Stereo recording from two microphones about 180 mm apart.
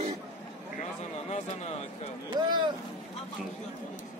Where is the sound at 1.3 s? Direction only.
40° left (ahead or behind).